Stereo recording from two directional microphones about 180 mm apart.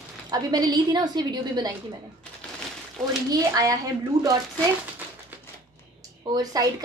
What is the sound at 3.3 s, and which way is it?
A woman's voice, 20° right (ahead or behind).